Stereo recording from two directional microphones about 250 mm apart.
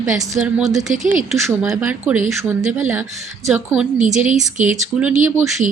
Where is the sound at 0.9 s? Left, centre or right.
Right.